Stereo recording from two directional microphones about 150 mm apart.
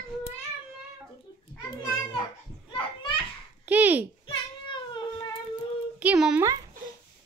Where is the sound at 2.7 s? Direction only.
30° left (ahead or behind).